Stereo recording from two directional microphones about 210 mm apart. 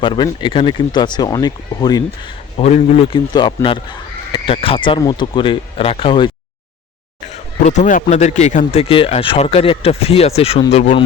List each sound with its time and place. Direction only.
0.0 s speech: 20° left (ahead or behind)
2.6 s speech: 30° left (ahead or behind)
7.7 s a man's voice: 35° left (ahead or behind)